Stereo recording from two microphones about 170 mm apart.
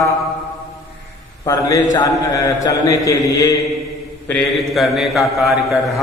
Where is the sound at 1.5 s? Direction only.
20° left (ahead or behind).